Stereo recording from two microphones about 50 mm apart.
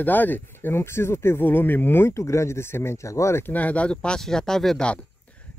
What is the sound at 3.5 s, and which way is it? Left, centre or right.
Speech, left.